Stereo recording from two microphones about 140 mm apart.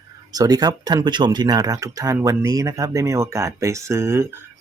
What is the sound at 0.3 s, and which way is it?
Speech, 25° right (ahead or behind).